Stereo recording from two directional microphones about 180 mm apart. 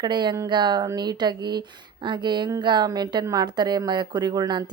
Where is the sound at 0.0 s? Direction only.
25° right (ahead or behind).